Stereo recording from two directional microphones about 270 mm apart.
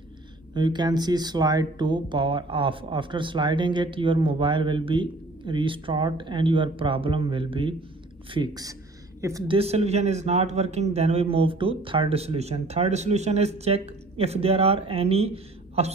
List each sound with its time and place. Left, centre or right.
0.6 s a man's voice: centre